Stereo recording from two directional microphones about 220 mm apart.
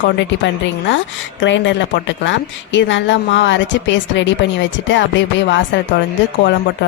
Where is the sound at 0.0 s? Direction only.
55° left (ahead or behind).